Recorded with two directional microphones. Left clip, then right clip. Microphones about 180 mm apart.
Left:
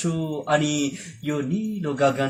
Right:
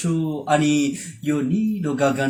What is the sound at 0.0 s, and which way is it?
Speech, 15° left (ahead or behind).